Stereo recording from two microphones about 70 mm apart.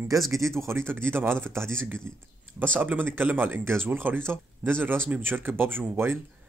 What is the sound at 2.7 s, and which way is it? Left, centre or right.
Speech, right.